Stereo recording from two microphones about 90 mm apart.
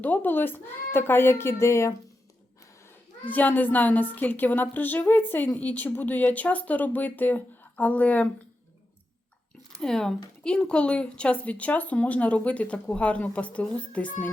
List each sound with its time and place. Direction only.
0.0 s a woman's voice: 20° left (ahead or behind)
3.2 s a woman's voice: 20° left (ahead or behind)
9.8 s speech: 5° left (ahead or behind)